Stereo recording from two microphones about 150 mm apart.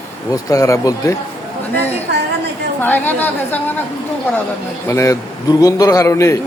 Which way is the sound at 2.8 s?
10° left (ahead or behind).